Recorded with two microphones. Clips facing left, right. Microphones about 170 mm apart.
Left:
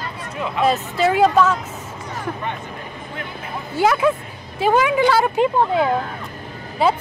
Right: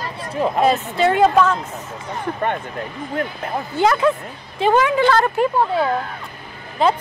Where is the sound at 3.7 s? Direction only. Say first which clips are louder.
Even; 5° left (ahead or behind).